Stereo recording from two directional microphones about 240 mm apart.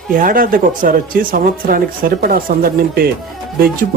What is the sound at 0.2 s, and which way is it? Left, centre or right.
Speech, right.